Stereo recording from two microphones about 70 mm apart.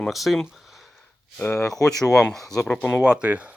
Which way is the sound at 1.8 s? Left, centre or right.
Centre.